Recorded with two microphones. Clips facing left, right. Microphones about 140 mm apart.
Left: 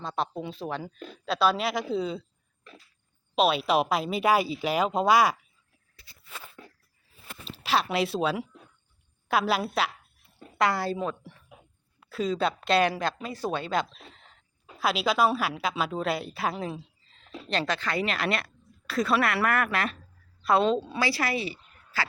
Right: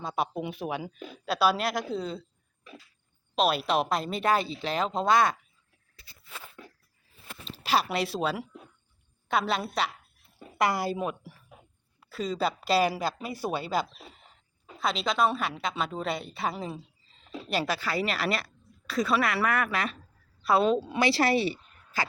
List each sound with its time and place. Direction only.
0.0 s a woman's voice: 10° right (ahead or behind)
3.3 s speech: centre (ahead or behind)
7.4 s a woman's voice: centre (ahead or behind)
10.6 s a woman's voice: 10° right (ahead or behind)
11.9 s a woman's voice: centre (ahead or behind)
20.9 s speech: 25° right (ahead or behind)